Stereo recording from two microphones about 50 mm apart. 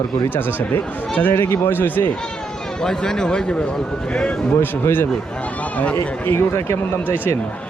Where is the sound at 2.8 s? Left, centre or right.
Centre.